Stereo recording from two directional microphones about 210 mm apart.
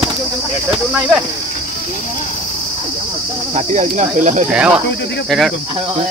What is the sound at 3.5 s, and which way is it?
Speech, 35° right (ahead or behind).